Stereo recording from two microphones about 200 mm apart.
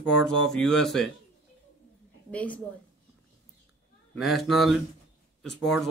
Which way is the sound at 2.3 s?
5° left (ahead or behind).